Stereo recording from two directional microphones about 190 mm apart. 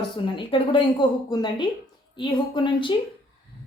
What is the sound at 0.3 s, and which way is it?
A woman's voice, 25° left (ahead or behind).